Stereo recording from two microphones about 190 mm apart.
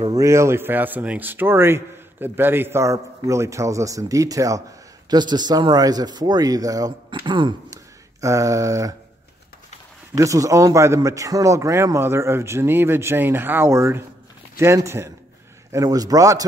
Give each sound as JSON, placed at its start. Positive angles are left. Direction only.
{"t": 0.0, "sound": "speech", "side_deg": -15}
{"t": 10.1, "sound": "speech", "side_deg": -15}